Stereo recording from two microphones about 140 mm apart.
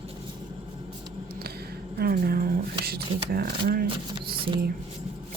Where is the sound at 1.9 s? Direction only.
90° right.